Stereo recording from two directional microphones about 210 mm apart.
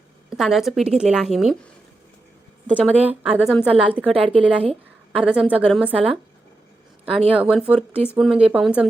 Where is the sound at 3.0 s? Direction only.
5° right (ahead or behind).